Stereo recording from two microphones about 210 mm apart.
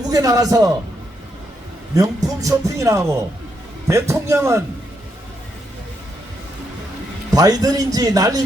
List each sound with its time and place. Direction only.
0.1 s speech: 15° right (ahead or behind)
2.0 s speech: 15° right (ahead or behind)
7.3 s speech: 15° right (ahead or behind)